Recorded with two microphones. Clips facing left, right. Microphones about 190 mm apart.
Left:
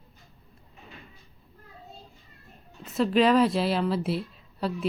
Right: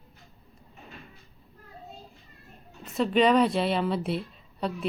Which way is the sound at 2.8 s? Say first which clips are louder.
Left 1 dB; centre (ahead or behind).